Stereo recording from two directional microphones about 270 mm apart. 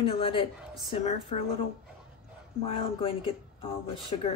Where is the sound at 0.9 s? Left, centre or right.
Left.